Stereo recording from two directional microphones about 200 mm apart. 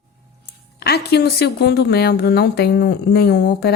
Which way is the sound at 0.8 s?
55° left (ahead or behind).